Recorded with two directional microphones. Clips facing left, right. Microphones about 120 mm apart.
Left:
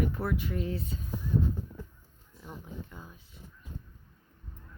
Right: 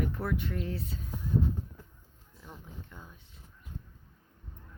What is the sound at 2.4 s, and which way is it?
Speech, 5° left (ahead or behind).